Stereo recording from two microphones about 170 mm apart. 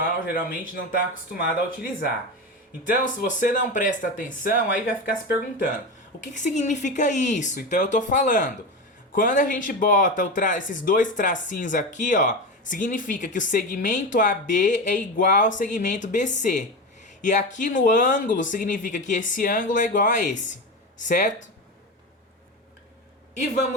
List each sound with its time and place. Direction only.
0.0 s speech: 55° left (ahead or behind)
2.8 s speech: 50° left (ahead or behind)